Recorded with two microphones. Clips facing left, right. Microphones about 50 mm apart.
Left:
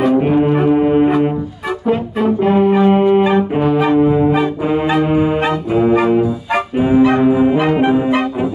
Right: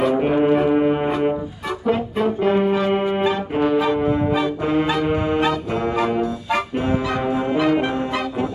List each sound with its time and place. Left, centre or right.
0.0 s brass instrument: centre
2.9 s music: centre
4.0 s brass instrument: centre
5.0 s music: centre
5.7 s brass instrument: centre
7.0 s brass instrument: left
7.2 s brass instrument: centre